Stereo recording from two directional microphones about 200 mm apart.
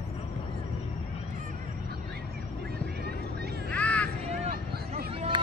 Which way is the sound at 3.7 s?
5° left (ahead or behind).